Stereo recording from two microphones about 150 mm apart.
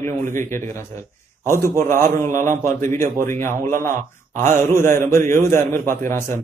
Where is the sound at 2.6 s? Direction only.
15° left (ahead or behind).